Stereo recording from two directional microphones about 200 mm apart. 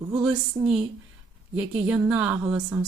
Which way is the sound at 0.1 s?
5° right (ahead or behind).